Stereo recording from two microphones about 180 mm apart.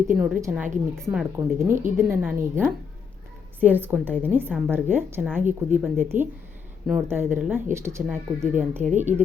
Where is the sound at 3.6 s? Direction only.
10° right (ahead or behind).